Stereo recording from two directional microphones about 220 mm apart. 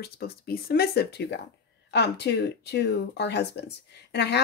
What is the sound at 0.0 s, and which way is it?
Speech, 45° left (ahead or behind).